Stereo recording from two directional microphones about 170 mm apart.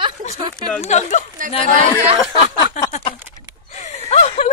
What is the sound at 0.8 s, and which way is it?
Speech, 40° left (ahead or behind).